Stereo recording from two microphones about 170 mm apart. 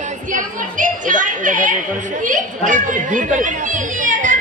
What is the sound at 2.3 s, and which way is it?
Speech, 50° right (ahead or behind).